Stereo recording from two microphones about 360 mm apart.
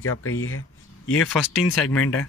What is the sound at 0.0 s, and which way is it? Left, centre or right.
Speech, left.